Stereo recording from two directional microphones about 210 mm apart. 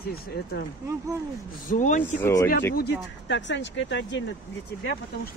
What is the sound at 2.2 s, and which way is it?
Speech, 15° left (ahead or behind).